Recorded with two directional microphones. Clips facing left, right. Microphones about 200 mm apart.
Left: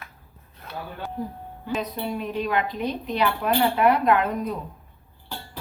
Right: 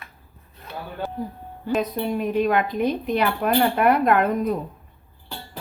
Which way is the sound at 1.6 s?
50° right (ahead or behind).